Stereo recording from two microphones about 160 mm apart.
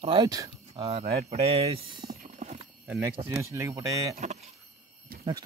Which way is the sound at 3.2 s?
20° right (ahead or behind).